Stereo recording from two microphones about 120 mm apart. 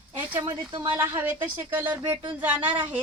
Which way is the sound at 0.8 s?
20° right (ahead or behind).